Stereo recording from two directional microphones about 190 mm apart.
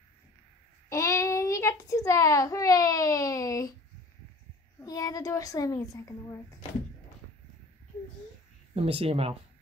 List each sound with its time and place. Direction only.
0.8 s a child's voice: 15° left (ahead or behind)
4.7 s a child's voice: 20° left (ahead or behind)
8.7 s speech: 30° right (ahead or behind)